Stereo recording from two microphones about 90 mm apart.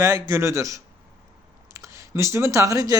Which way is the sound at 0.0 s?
35° right (ahead or behind).